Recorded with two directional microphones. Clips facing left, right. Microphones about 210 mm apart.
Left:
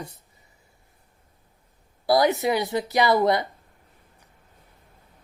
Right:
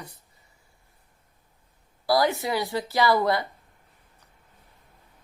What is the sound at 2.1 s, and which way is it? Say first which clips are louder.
A woman's voice: left 3 dB; 20° left (ahead or behind).